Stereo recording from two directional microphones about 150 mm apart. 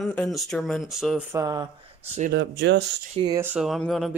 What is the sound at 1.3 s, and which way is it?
Speech, 25° right (ahead or behind).